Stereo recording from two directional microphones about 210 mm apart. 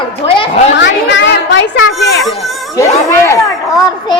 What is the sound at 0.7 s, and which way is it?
Speech, 60° left (ahead or behind).